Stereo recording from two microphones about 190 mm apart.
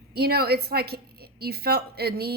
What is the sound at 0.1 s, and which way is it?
A woman's voice, 55° right (ahead or behind).